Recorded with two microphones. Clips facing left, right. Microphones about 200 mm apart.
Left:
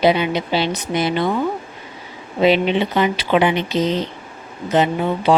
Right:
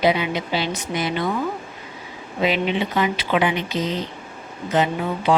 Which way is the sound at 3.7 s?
75° left (ahead or behind).